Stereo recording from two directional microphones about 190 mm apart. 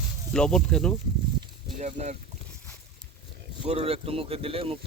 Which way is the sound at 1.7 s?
35° right (ahead or behind).